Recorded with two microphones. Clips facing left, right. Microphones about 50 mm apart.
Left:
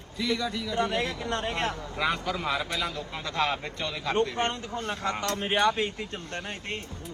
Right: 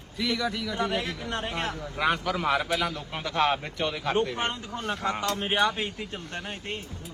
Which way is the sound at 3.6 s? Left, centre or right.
Right.